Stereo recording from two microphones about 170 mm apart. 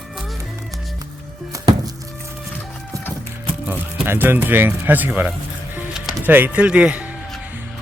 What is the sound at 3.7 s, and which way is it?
Speech, 10° right (ahead or behind).